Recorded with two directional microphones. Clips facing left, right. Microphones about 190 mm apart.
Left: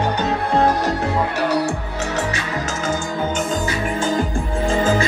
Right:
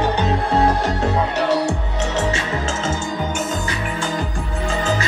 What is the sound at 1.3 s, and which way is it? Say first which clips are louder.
Music: right 1 dB; 25° right (ahead or behind).